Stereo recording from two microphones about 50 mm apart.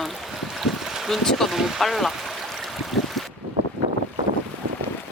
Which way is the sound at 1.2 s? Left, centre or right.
Centre.